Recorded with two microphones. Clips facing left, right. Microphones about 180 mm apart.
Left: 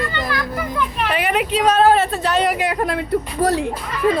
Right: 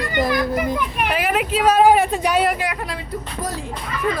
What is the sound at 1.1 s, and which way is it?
Speech, centre (ahead or behind).